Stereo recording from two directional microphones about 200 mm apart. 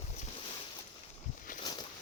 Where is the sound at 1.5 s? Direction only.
40° left (ahead or behind).